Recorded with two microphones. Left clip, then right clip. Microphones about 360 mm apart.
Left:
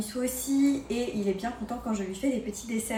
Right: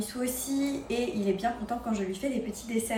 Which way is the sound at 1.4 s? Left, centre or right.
Centre.